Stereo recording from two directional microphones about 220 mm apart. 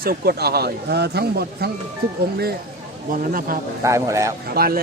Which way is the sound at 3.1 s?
40° right (ahead or behind).